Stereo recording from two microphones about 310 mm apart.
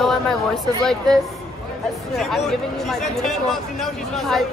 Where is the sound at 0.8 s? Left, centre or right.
Centre.